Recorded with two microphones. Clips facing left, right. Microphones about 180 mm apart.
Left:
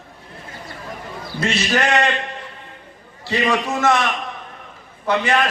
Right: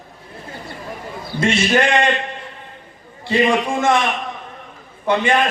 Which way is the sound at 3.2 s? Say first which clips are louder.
Right 3 dB; 25° right (ahead or behind).